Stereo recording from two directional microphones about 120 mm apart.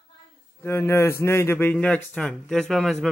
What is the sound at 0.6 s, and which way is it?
A man's voice, 20° left (ahead or behind).